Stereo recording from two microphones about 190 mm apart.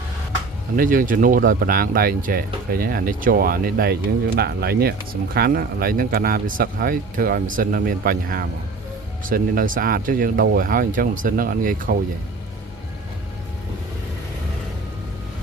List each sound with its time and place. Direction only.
0.8 s speech: 45° right (ahead or behind)